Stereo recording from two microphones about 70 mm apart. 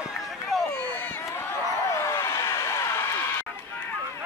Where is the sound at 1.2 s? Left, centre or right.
Left.